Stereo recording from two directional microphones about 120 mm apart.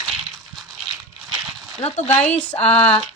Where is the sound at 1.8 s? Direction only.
60° left (ahead or behind).